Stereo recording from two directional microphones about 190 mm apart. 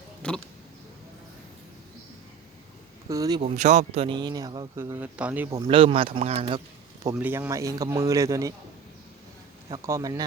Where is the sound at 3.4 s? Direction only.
35° right (ahead or behind).